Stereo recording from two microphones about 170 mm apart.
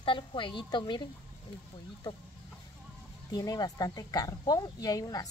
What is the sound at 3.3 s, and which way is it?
Speech, 20° left (ahead or behind).